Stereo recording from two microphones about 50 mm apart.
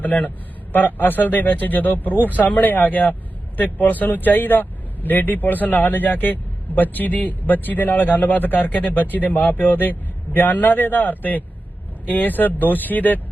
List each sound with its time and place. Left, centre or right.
0.0 s a man's voice: left